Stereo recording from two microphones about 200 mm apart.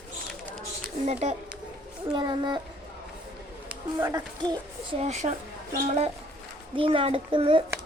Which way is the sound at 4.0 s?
15° right (ahead or behind).